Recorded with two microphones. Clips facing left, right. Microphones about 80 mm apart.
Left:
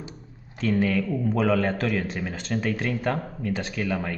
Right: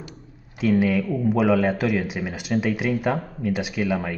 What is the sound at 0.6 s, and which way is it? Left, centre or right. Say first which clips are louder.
Speech: right 3 dB; centre.